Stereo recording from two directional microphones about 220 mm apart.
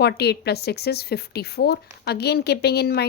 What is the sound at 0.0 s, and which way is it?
A woman's voice, 45° left (ahead or behind).